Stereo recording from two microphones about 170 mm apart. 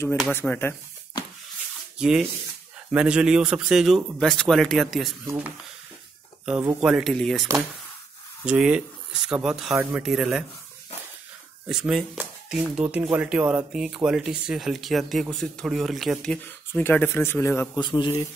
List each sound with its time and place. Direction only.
0.3 s speech: 10° left (ahead or behind)
2.0 s speech: 5° right (ahead or behind)
6.6 s speech: 10° right (ahead or behind)
8.5 s speech: 5° right (ahead or behind)
11.6 s speech: 5° right (ahead or behind); by 17.6 s 15° left (ahead or behind)
17.7 s a man's voice: 25° left (ahead or behind)